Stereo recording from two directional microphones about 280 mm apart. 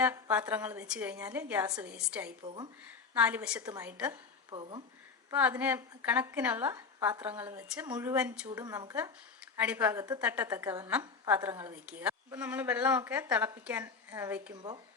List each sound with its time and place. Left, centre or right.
0.0 s a woman's voice: centre
4.5 s a woman's voice: centre
5.3 s a woman's voice: centre